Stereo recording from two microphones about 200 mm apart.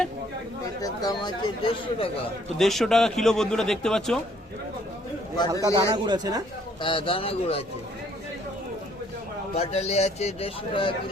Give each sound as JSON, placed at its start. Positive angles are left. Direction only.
{"t": 0.8, "sound": "speech", "side_deg": 20}
{"t": 2.6, "sound": "a man's voice", "side_deg": 0}
{"t": 5.6, "sound": "speech", "side_deg": -20}
{"t": 6.8, "sound": "speech", "side_deg": 25}
{"t": 9.6, "sound": "a man's voice", "side_deg": 30}